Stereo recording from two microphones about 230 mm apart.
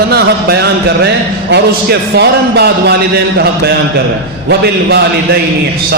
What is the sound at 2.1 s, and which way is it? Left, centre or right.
Music, right.